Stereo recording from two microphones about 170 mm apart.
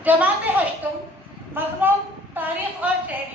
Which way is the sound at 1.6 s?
15° right (ahead or behind).